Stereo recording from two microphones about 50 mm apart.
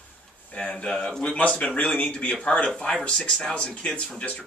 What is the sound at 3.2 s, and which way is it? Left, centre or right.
Speech, centre.